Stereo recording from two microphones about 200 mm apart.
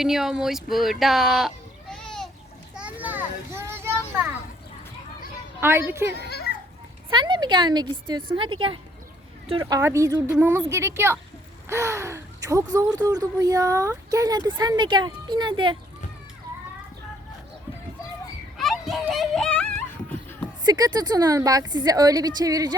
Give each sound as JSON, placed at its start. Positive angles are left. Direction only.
{"t": 0.0, "sound": "speech", "side_deg": 0}
{"t": 2.7, "sound": "children playing", "side_deg": -5}
{"t": 5.5, "sound": "speech", "side_deg": -10}
{"t": 6.2, "sound": "children playing", "side_deg": 55}
{"t": 7.1, "sound": "a woman's voice", "side_deg": -25}
{"t": 18.5, "sound": "a sound", "side_deg": 0}
{"t": 20.7, "sound": "a woman's voice", "side_deg": -20}